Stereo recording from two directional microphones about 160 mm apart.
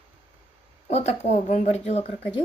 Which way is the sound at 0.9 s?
45° left (ahead or behind).